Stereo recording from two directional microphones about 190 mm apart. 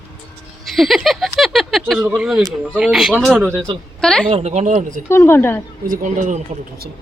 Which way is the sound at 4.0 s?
5° left (ahead or behind).